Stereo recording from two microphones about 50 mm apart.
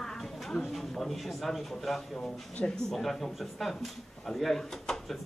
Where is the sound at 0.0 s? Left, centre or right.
Centre.